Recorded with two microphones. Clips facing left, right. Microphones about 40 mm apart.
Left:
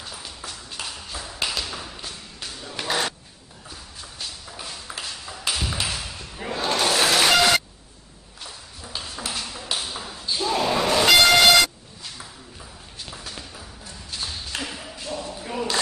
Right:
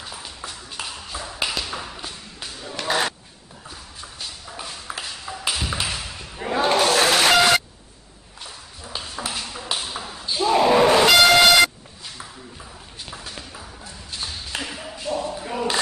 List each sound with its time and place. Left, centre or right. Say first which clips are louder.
0.0 s ping: right 2 dB; centre
2.7 s a sound: right 3 dB; centre
4.0 s tap: even; centre
6.5 s battle cry: right 6 dB; right
6.8 s vehicle: even; centre
8.5 s ping: right 1 dB; centre
10.7 s a sound: right 6 dB; right
11.1 s vehicle: right 1 dB; centre
13.0 s a sound: right 1 dB; centre